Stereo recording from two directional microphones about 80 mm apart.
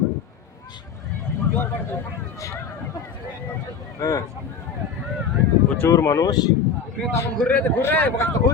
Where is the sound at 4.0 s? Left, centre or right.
Left.